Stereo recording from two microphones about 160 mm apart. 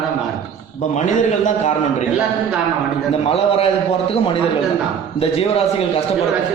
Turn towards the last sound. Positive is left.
turn(degrees=40)  # may be behind; listen again after turning